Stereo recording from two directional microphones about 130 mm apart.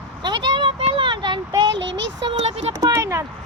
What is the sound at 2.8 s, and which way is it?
Speech, 25° right (ahead or behind).